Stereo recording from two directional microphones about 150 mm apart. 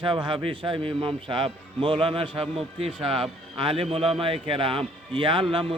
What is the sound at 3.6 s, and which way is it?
A man's voice, 40° right (ahead or behind).